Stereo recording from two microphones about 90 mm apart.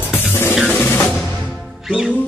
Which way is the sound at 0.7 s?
20° left (ahead or behind).